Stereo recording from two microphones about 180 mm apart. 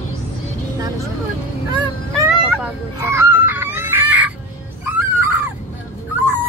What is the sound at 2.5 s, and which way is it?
Chicken, 10° right (ahead or behind).